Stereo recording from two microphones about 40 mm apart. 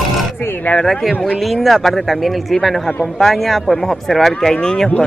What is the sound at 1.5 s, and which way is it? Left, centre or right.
Speech, centre.